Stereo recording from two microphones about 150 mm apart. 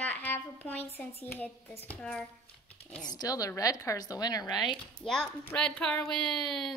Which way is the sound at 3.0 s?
25° left (ahead or behind).